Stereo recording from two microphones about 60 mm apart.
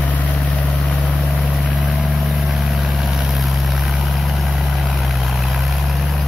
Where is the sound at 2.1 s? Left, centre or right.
Centre.